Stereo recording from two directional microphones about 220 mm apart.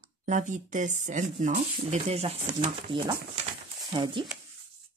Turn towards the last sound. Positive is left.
turn(degrees=-20)  # may be behind; listen again after turning